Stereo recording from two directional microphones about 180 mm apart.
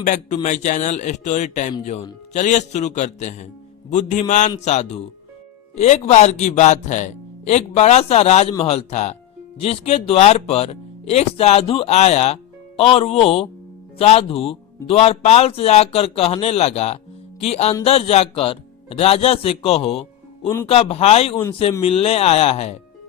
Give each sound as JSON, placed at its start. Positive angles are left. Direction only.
{"t": 0.0, "sound": "a man's voice", "side_deg": 45}